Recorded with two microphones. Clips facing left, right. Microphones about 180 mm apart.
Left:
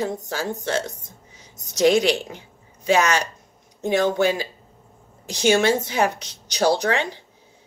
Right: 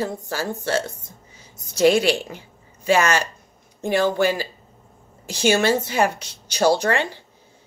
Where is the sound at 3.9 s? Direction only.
20° left (ahead or behind).